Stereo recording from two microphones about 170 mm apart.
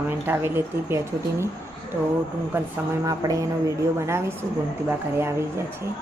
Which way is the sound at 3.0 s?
20° right (ahead or behind).